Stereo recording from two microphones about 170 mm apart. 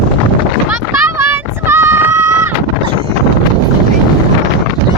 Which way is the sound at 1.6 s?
15° right (ahead or behind).